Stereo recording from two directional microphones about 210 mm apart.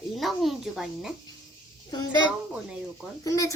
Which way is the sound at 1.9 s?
20° left (ahead or behind).